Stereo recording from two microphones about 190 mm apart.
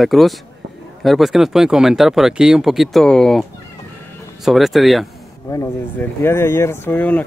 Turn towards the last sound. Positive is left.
turn(degrees=10)  # may be behind; listen again after turning